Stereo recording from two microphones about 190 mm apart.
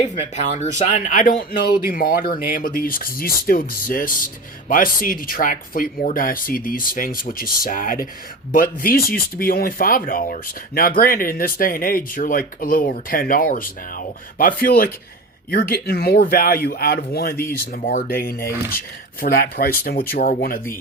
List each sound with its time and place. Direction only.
0.0 s speech: 40° left (ahead or behind)